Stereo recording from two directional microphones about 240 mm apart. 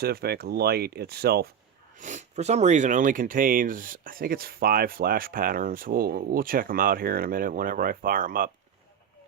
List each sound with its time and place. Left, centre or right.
0.0 s speech: right
2.0 s speech: right